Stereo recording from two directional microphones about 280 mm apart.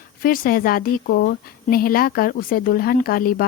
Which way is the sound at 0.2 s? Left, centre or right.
Left.